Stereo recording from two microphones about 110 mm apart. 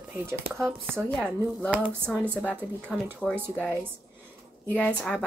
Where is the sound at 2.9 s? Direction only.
5° right (ahead or behind).